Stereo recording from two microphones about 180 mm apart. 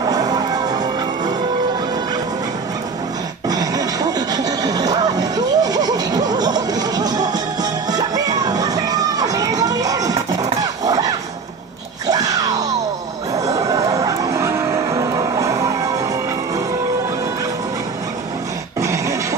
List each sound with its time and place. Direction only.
0.0 s music: 20° right (ahead or behind)
3.4 s music: 20° right (ahead or behind)
12.1 s screaming: 20° right (ahead or behind)
13.5 s vehicle: 20° right (ahead or behind)
18.8 s dog: 15° right (ahead or behind)